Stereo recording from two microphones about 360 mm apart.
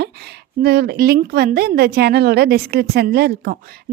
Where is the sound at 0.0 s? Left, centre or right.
Right.